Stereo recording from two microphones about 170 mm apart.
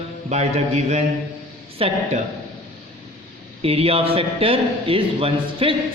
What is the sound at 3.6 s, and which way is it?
A man's voice, 35° right (ahead or behind).